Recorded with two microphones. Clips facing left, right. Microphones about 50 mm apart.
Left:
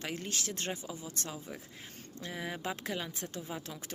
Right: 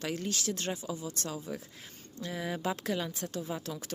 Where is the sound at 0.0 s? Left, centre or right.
Left.